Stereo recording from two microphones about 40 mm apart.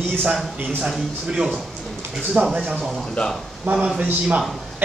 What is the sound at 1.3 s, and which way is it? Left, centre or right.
Speech, right.